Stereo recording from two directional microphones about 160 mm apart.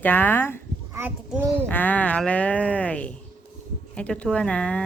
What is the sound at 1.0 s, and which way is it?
Speech, 15° right (ahead or behind).